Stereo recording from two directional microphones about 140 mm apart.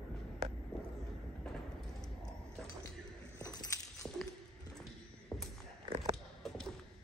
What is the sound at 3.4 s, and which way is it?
Keys jangling, 20° left (ahead or behind).